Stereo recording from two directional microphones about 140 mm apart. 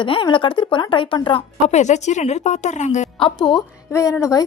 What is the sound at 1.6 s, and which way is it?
Speech, 55° left (ahead or behind).